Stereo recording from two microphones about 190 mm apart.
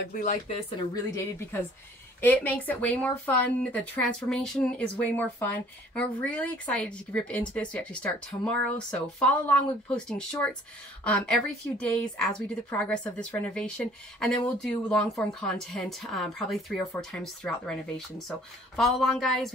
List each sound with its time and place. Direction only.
0.1 s speech: 45° left (ahead or behind)
0.9 s speech: 15° left (ahead or behind)
12.7 s speech: 5° left (ahead or behind)